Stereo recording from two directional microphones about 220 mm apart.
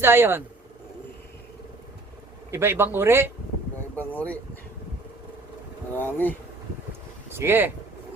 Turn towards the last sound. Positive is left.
turn(degrees=-10)  # may be behind; listen again after turning